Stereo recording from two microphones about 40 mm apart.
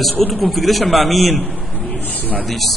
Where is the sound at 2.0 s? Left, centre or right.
Left.